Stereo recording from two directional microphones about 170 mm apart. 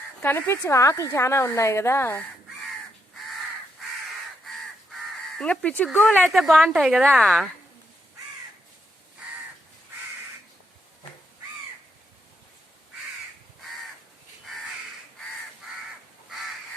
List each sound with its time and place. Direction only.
0.2 s a woman's voice: 15° left (ahead or behind)
5.4 s a woman's voice: 10° left (ahead or behind)